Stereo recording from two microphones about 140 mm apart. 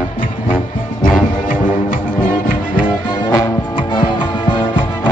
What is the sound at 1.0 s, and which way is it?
Music, 75° left (ahead or behind).